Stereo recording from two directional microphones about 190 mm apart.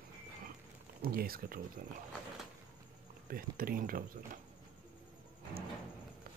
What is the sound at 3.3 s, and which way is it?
Speech, 50° right (ahead or behind).